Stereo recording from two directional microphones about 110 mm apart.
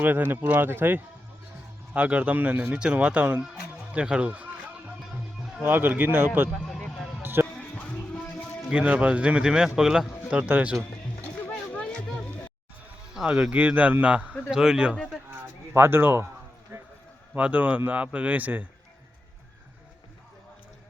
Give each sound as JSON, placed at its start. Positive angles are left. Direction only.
{"t": 0.0, "sound": "speech", "side_deg": -20}
{"t": 5.6, "sound": "speech", "side_deg": -15}
{"t": 6.7, "sound": "a sound", "side_deg": 10}
{"t": 7.2, "sound": "music", "side_deg": -20}
{"t": 7.4, "sound": "music", "side_deg": 10}
{"t": 8.7, "sound": "speech", "side_deg": -10}
{"t": 11.2, "sound": "a sound", "side_deg": 15}
{"t": 13.1, "sound": "speech", "side_deg": -10}
{"t": 14.9, "sound": "speech", "side_deg": 5}
{"t": 15.3, "sound": "speech", "side_deg": -20}
{"t": 17.3, "sound": "speech", "side_deg": -15}